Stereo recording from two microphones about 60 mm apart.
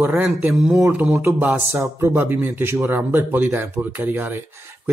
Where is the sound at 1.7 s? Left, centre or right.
Right.